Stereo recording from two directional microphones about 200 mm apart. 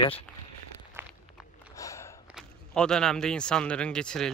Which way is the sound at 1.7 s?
15° left (ahead or behind).